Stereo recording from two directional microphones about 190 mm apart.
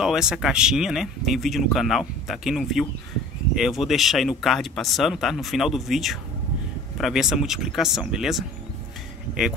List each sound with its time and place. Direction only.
0.0 s speech: 5° right (ahead or behind)